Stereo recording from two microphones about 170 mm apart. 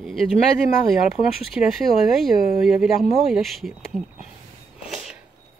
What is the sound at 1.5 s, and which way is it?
Speech, centre (ahead or behind).